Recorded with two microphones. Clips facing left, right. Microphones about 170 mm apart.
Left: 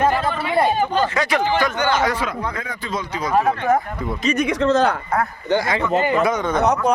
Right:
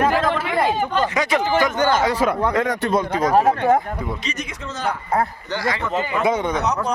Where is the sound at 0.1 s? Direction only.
90° right.